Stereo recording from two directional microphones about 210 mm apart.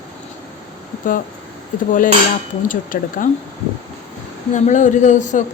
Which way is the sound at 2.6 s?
40° left (ahead or behind).